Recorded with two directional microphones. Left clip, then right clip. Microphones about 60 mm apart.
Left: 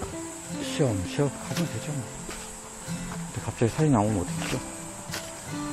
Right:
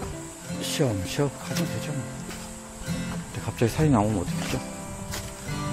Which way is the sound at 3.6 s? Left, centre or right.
Right.